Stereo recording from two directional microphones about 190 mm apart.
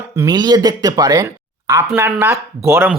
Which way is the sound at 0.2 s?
20° right (ahead or behind).